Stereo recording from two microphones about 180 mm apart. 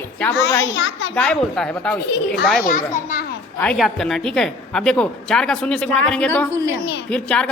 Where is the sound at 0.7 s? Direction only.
90° left.